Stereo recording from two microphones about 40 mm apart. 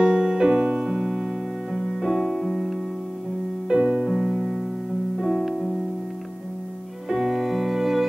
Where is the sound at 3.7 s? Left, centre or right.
Right.